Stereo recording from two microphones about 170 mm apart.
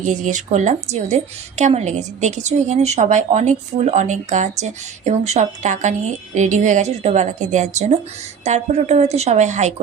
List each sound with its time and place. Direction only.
0.0 s a woman's voice: 45° right (ahead or behind)